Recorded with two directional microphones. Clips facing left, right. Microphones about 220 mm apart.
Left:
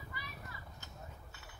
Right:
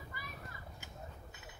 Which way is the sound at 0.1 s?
50° right (ahead or behind).